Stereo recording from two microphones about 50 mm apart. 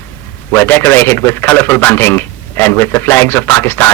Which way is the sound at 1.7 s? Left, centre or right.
Left.